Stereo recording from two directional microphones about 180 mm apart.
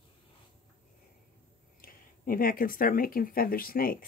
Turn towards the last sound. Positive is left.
turn(degrees=55)  # may be behind; listen again after turning